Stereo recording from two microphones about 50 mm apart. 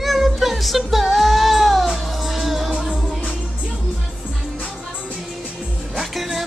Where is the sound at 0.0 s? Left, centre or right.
Centre.